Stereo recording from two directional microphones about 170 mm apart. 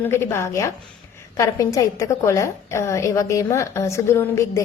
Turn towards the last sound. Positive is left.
turn(degrees=15)  # may be behind; listen again after turning